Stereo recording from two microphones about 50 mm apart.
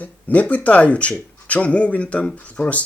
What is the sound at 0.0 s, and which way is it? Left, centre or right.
Speech, left.